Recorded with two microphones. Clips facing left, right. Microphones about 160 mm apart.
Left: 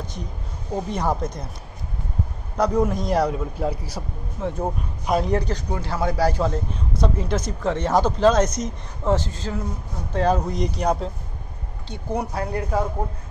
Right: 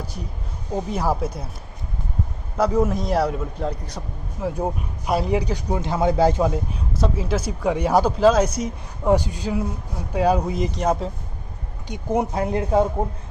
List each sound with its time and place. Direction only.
0.8 s speech: 5° right (ahead or behind)
2.5 s a man's voice: 5° right (ahead or behind)
11.9 s speech: 20° right (ahead or behind)